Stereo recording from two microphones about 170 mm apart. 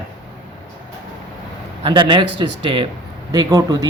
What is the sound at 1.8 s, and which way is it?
Speech, 30° right (ahead or behind).